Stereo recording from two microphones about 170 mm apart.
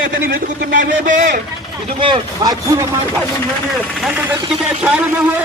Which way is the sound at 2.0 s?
30° right (ahead or behind).